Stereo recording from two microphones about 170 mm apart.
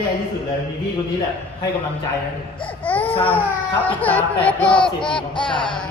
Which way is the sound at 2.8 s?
10° left (ahead or behind).